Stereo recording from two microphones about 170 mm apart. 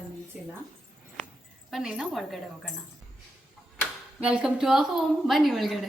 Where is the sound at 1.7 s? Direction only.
Centre (ahead or behind).